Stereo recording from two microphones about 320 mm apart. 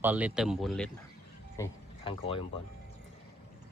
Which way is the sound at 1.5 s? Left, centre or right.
Centre.